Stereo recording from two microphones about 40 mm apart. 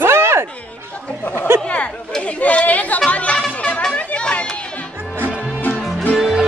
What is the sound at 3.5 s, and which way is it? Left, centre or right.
Music, left.